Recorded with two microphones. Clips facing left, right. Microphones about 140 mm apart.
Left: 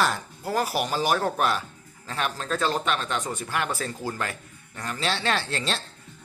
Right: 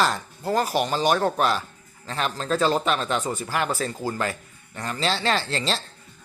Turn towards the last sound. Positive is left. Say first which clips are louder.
# right 2 dB
turn(degrees=0)  # may be behind; listen again after turning